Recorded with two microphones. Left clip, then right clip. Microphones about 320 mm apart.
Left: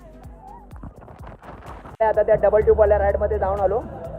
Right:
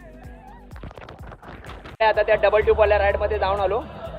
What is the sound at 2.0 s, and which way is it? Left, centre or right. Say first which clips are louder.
Speech: left 1 dB; right.